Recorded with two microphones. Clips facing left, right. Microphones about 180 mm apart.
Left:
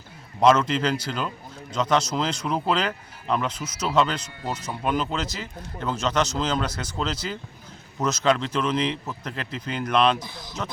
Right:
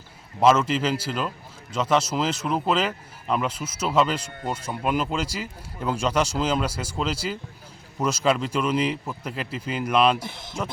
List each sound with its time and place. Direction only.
0.3 s speech: 5° right (ahead or behind)
10.2 s speech: 25° right (ahead or behind)